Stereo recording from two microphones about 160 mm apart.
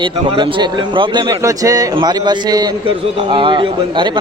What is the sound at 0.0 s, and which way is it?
A man's voice, 30° right (ahead or behind).